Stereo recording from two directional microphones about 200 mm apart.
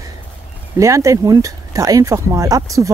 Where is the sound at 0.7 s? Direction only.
15° right (ahead or behind).